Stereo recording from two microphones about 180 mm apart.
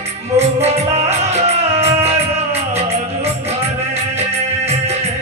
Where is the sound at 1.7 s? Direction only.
35° right (ahead or behind).